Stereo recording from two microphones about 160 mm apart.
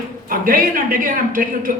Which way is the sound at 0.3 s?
60° right (ahead or behind).